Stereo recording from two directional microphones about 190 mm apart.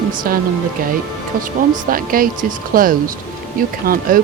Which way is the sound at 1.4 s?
45° right (ahead or behind).